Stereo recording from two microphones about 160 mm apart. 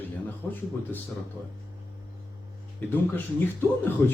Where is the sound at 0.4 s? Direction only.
5° left (ahead or behind).